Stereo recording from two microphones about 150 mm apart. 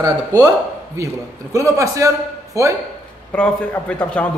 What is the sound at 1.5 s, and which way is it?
A woman's voice, 20° right (ahead or behind).